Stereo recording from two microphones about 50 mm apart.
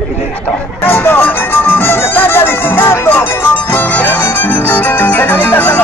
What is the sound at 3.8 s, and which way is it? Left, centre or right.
Music, left.